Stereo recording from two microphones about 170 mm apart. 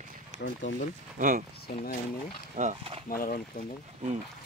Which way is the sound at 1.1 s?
50° right (ahead or behind).